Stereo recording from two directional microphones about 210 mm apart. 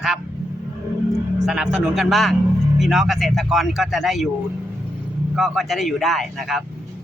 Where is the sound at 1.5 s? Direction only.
5° right (ahead or behind).